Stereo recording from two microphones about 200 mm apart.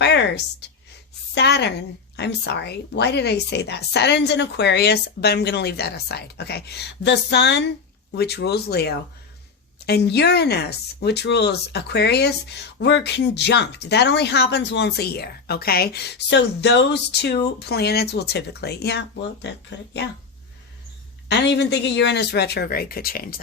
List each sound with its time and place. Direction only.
0.0 s a sound: 60° left (ahead or behind)
1.4 s speech: 55° left (ahead or behind)
21.2 s speech: 60° left (ahead or behind)